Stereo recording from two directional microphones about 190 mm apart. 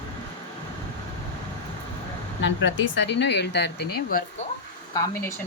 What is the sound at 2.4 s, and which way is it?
Speech, 70° left (ahead or behind).